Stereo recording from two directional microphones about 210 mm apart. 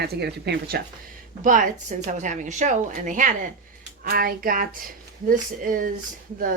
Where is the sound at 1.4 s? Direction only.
40° right (ahead or behind).